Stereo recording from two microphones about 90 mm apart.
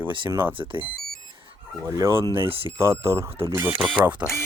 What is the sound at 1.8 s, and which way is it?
Speech, 35° right (ahead or behind).